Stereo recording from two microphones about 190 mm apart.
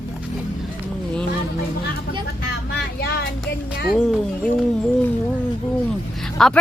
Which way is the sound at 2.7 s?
60° left (ahead or behind).